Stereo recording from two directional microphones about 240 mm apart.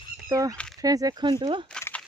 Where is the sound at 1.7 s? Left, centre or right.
Centre.